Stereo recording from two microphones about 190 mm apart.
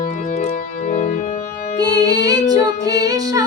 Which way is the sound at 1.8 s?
20° right (ahead or behind).